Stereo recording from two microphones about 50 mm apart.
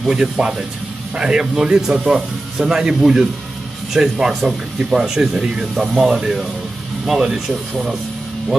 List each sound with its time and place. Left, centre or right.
0.0 s speech: centre